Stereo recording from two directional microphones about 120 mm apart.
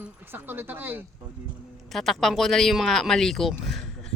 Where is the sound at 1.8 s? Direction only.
Centre (ahead or behind).